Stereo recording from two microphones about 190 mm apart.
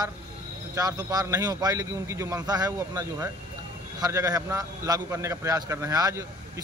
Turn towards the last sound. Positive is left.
turn(degrees=-20)  # may be behind; listen again after turning